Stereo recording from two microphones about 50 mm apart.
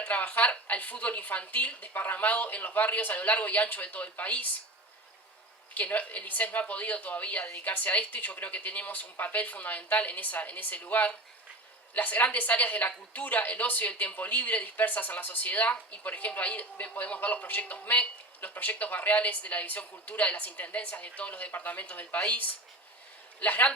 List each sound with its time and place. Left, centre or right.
0.0 s speech: left
5.7 s speech: left
23.4 s speech: left